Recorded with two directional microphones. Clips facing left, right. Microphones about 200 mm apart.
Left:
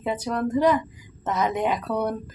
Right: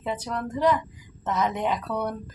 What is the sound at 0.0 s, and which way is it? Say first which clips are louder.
A woman's voice: left 4 dB; 10° left (ahead or behind).